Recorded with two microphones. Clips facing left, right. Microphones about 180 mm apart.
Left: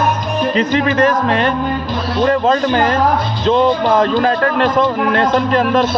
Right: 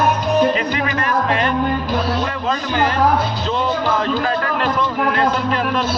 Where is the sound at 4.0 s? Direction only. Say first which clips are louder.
Left 6 dB; 45° left (ahead or behind).